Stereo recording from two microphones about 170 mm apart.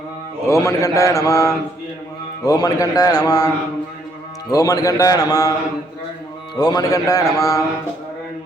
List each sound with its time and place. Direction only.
0.4 s a man's voice: 15° left (ahead or behind)
6.6 s a man's voice: 25° left (ahead or behind)